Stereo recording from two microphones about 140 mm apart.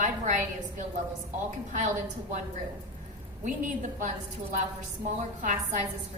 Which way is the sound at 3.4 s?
65° right (ahead or behind).